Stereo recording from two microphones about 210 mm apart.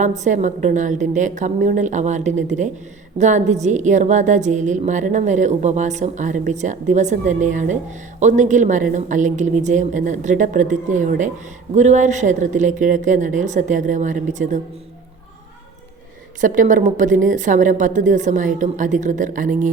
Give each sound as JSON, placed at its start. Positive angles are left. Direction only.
{"t": 0.0, "sound": "a woman's voice", "side_deg": -35}
{"t": 16.4, "sound": "a woman's voice", "side_deg": -35}